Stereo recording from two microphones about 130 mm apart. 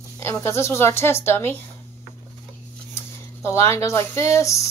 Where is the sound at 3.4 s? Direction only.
20° left (ahead or behind).